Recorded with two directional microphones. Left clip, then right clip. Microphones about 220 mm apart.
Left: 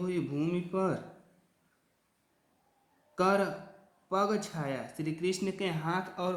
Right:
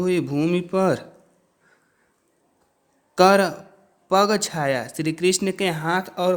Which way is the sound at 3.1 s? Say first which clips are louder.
Right 13 dB; 45° right (ahead or behind).